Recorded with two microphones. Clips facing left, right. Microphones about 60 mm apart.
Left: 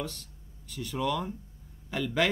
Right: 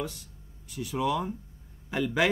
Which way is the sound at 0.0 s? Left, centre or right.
Centre.